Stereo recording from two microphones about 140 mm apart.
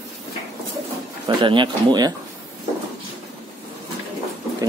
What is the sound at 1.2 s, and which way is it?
Speech, 35° right (ahead or behind).